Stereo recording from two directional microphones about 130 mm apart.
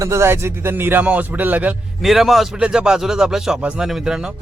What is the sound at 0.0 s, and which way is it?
Speech, 20° right (ahead or behind).